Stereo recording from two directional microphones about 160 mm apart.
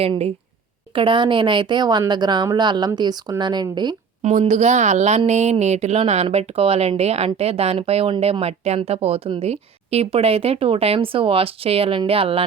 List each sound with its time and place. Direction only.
0.0 s a woman's voice: 40° right (ahead or behind)
4.2 s speech: 45° right (ahead or behind)